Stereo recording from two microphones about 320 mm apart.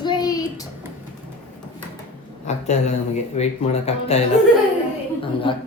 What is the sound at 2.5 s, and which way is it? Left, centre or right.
Speech, left.